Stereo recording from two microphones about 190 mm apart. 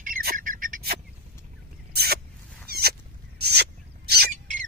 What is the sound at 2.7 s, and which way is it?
Rodents, 55° right (ahead or behind).